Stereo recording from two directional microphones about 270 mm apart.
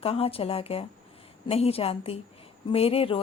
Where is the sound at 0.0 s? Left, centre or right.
Left.